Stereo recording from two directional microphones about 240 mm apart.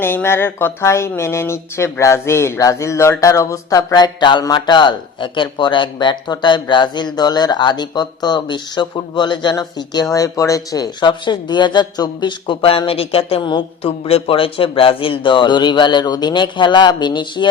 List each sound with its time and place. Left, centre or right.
0.0 s speech: centre